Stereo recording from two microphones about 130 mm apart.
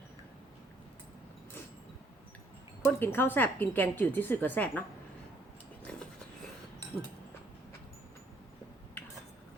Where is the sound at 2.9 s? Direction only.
15° left (ahead or behind).